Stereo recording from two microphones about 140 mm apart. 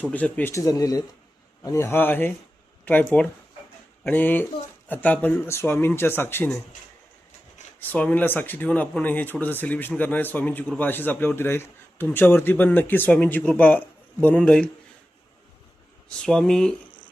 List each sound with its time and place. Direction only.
0.1 s a man's voice: 10° left (ahead or behind)
7.8 s a man's voice: 10° left (ahead or behind)
16.0 s speech: 5° left (ahead or behind)